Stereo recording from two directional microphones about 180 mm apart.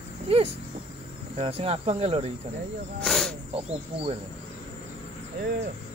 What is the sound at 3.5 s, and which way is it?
Speech, 30° right (ahead or behind).